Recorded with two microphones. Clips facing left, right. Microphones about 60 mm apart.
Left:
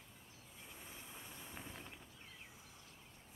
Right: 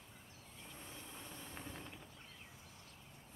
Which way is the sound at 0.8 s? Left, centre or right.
Centre.